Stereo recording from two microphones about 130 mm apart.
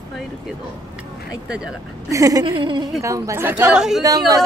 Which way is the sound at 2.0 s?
25° right (ahead or behind).